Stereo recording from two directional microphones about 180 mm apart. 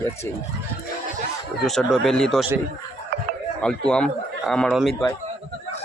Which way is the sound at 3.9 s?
5° left (ahead or behind).